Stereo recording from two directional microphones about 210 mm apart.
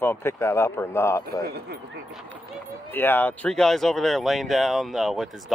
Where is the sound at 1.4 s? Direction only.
50° right (ahead or behind).